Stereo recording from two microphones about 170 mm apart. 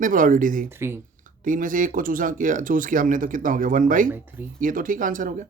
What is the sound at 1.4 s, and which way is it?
Speech, 50° right (ahead or behind).